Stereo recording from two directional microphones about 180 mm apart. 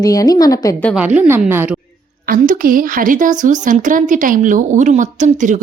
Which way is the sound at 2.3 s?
50° right (ahead or behind).